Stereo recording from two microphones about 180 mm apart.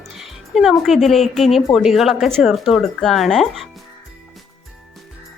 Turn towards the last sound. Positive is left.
turn(degrees=0)  # may be behind; listen again after turning